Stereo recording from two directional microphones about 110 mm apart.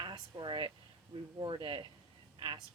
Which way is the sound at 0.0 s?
45° right (ahead or behind).